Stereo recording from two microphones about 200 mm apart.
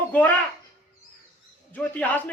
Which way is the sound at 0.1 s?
5° left (ahead or behind).